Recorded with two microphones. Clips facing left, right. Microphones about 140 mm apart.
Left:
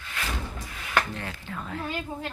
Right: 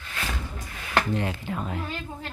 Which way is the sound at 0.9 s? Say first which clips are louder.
Right 3 dB; 20° right (ahead or behind).